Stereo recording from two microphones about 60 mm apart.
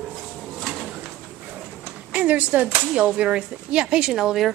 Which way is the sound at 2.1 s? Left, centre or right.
Right.